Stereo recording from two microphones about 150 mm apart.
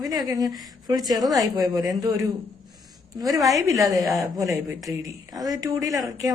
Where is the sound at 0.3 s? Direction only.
25° right (ahead or behind).